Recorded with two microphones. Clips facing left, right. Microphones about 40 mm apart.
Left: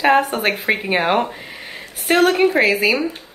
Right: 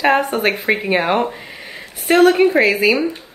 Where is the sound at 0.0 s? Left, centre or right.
Centre.